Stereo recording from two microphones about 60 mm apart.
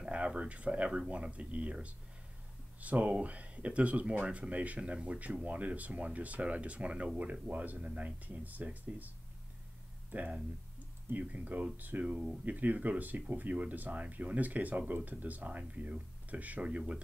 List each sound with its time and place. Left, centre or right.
0.0 s speech: centre
10.1 s speech: right